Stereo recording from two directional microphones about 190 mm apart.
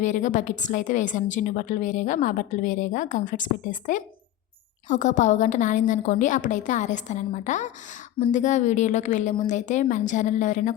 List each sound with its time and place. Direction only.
0.0 s a woman's voice: 40° left (ahead or behind)